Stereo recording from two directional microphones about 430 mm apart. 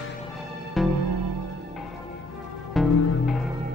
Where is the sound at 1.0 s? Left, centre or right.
Right.